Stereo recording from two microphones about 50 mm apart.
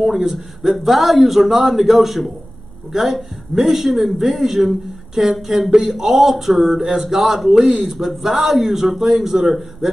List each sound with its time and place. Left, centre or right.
0.0 s speech: centre
7.6 s speech: centre
8.0 s speech: centre